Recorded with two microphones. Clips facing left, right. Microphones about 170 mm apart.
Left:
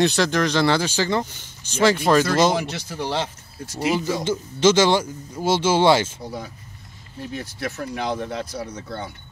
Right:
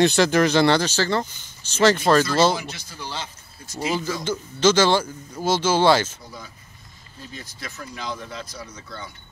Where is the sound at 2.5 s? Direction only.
70° left (ahead or behind).